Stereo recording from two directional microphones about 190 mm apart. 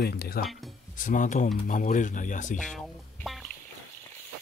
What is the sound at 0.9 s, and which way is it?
Speech, 45° left (ahead or behind).